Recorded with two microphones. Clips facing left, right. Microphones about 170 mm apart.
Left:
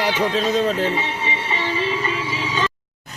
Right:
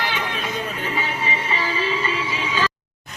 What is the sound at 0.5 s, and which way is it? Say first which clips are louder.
Music: left 9 dB; 90° left.